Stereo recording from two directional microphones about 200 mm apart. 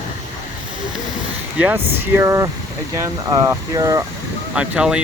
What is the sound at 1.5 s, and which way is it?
Speech, 10° right (ahead or behind).